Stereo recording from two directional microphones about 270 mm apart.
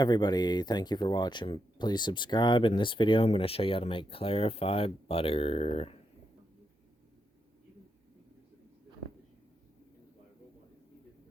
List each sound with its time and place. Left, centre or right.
0.0 s speech: centre